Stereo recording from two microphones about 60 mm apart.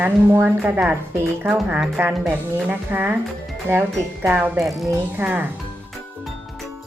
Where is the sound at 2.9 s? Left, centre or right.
Right.